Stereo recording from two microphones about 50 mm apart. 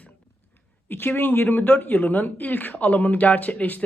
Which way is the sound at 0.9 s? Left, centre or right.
Left.